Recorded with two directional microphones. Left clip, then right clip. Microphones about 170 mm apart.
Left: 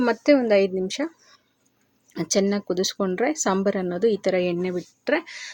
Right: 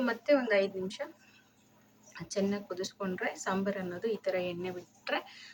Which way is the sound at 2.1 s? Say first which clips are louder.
Left 11 dB; 45° left (ahead or behind).